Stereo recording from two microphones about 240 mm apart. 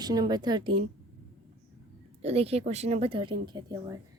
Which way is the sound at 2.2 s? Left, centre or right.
Right.